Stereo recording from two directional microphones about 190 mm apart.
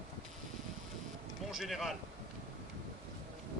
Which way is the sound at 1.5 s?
Centre (ahead or behind).